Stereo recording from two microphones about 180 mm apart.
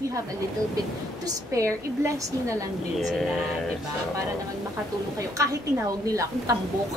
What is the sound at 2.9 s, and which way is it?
Speech, centre (ahead or behind).